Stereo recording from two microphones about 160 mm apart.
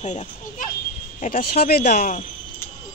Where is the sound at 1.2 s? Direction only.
70° left (ahead or behind).